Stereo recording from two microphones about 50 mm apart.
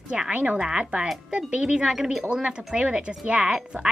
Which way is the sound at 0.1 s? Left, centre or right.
Right.